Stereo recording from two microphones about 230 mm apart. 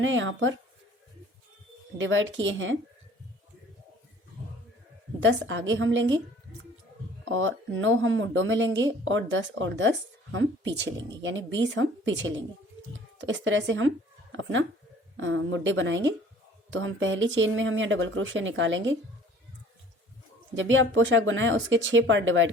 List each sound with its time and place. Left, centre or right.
0.0 s speech: right
2.0 s speech: right
5.2 s speech: right
7.3 s a woman's voice: right
15.2 s speech: right
20.6 s speech: right